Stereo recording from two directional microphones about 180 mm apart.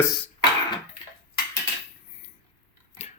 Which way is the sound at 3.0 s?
35° left (ahead or behind).